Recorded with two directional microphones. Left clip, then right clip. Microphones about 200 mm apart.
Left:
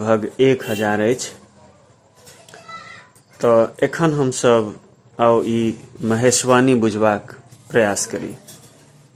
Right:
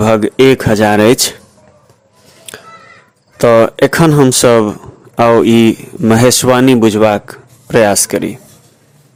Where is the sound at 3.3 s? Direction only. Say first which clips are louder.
Right 7 dB; 40° right (ahead or behind).